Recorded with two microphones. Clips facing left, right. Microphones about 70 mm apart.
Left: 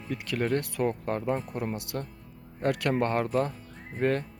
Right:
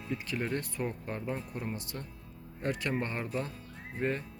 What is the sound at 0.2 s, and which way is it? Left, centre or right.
Speech, left.